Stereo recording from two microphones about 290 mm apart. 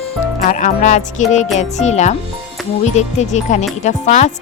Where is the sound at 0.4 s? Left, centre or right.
Left.